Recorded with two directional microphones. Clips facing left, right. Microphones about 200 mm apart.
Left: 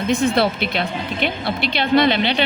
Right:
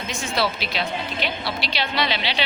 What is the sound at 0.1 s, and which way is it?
A woman's voice, 60° left (ahead or behind).